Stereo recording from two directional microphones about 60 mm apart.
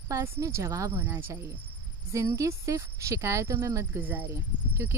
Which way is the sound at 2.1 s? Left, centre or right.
Right.